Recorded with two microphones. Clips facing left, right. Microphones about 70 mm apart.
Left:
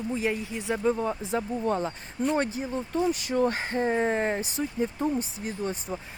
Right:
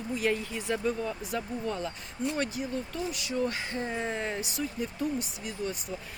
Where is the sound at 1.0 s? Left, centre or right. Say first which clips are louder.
Left 5 dB; left.